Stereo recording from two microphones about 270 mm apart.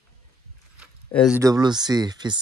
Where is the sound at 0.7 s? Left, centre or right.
Centre.